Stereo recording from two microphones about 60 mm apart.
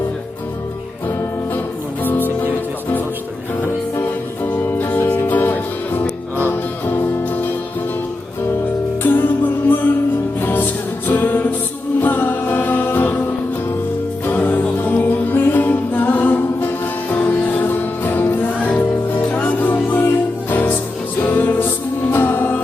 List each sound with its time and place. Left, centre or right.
2.0 s music: left
4.0 s music: left
9.0 s music: left
14.3 s music: left